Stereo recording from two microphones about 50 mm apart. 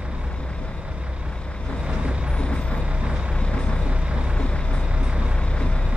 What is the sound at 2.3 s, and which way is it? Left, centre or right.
Vehicle, left.